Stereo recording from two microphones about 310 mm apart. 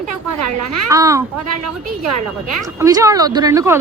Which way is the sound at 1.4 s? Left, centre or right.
Right.